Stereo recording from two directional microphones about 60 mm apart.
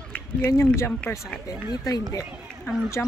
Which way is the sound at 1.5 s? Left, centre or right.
Left.